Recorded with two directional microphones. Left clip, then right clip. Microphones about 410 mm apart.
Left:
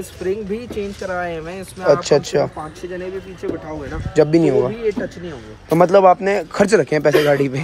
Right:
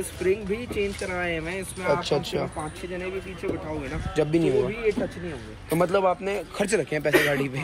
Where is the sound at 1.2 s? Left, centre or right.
Centre.